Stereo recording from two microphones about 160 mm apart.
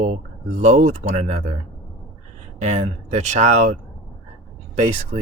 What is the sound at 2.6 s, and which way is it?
Speech, 45° right (ahead or behind).